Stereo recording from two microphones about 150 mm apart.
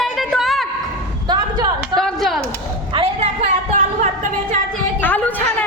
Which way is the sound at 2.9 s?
40° right (ahead or behind).